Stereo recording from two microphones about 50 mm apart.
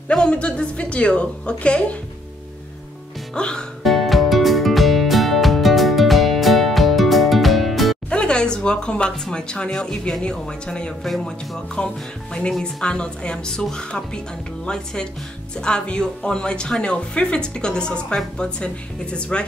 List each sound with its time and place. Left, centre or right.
0.1 s a woman's voice: left
3.3 s a woman's voice: centre
3.8 s music: centre
8.1 s speech: centre
15.6 s speech: centre